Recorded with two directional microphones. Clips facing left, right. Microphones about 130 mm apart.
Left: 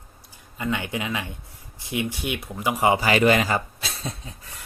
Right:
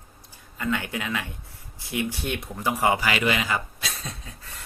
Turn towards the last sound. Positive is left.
turn(degrees=30)  # may be behind; listen again after turning